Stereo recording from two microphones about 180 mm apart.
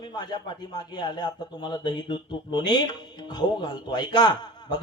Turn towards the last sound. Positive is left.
turn(degrees=25)  # may be behind; listen again after turning